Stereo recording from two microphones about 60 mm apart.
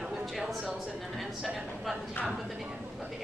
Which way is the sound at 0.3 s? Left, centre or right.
Centre.